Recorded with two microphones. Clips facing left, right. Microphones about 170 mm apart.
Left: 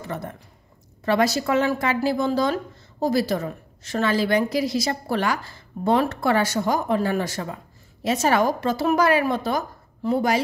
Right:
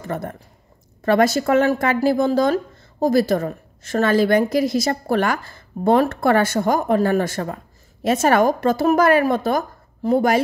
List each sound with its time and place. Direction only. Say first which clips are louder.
0.0 s speech: right 4 dB; 50° right (ahead or behind)